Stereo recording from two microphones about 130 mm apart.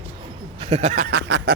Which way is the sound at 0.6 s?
55° right (ahead or behind).